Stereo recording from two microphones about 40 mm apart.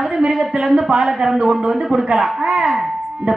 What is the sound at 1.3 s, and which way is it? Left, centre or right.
Speech, right.